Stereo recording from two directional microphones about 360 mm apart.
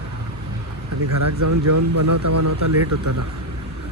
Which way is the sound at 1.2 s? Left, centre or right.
Right.